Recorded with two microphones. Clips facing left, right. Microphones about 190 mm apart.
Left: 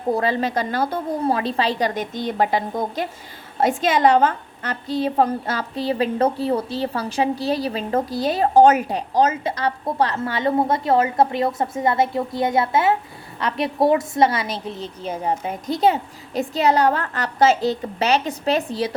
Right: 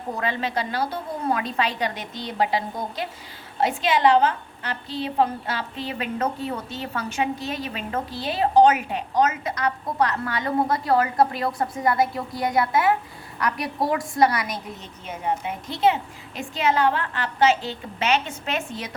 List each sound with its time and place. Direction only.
0.1 s a woman's voice: 35° left (ahead or behind)
1.3 s a woman's voice: 30° left (ahead or behind)